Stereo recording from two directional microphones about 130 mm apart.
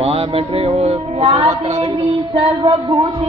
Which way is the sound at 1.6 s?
55° right (ahead or behind).